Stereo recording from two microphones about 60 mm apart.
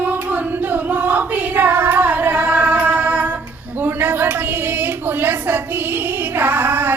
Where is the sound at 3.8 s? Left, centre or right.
Right.